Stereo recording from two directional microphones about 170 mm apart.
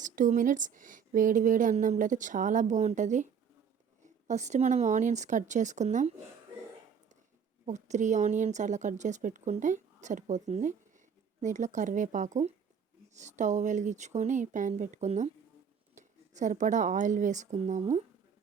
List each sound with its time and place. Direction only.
0.0 s speech: 50° right (ahead or behind)
7.6 s speech: 45° right (ahead or behind)